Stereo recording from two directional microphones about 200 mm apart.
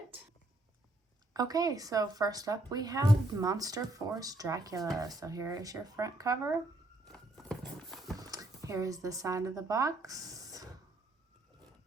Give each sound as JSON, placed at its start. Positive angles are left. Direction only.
{"t": 1.3, "sound": "speech", "side_deg": -20}
{"t": 7.0, "sound": "walk", "side_deg": 0}
{"t": 8.2, "sound": "speech", "side_deg": -15}